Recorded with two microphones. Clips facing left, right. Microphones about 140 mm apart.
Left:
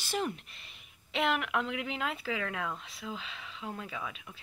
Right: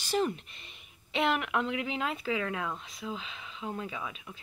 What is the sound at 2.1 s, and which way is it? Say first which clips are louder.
Speech: right 3 dB; 20° right (ahead or behind).